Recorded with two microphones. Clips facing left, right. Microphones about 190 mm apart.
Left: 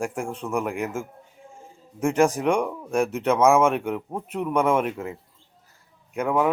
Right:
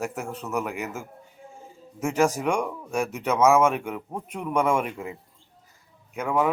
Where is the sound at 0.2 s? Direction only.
5° right (ahead or behind).